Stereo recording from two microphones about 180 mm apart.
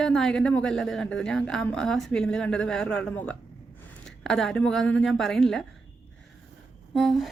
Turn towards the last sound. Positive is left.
turn(degrees=0)  # may be behind; listen again after turning